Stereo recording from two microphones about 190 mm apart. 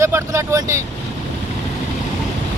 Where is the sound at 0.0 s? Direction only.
15° right (ahead or behind).